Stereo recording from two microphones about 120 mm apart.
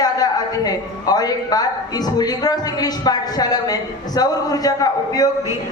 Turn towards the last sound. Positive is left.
turn(degrees=30)  # may be behind; listen again after turning